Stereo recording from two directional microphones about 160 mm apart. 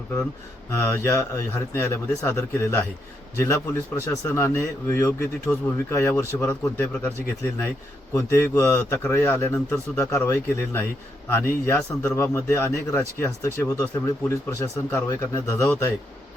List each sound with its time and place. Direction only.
0.7 s speech: 15° left (ahead or behind)
8.1 s speech: 20° left (ahead or behind)